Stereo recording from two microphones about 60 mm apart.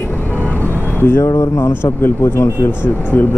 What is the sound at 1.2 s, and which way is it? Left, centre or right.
Speech, left.